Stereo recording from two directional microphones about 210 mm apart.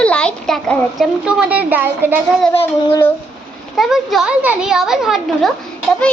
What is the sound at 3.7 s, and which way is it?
Speech, centre (ahead or behind).